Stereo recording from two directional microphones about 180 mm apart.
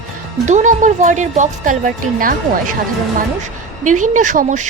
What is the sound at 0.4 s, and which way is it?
A woman's voice, 45° right (ahead or behind).